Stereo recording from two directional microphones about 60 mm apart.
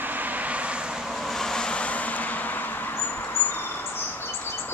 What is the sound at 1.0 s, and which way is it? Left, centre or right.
Vehicle, centre.